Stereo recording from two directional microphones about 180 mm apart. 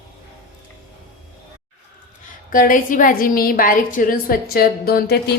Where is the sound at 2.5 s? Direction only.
50° left (ahead or behind).